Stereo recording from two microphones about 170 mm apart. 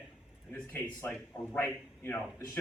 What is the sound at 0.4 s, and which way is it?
Speech, 10° left (ahead or behind).